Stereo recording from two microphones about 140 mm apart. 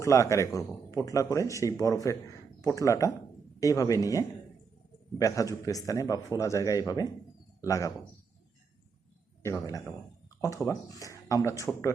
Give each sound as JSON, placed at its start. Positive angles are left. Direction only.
{"t": 0.0, "sound": "speech", "side_deg": 20}
{"t": 9.4, "sound": "speech", "side_deg": 20}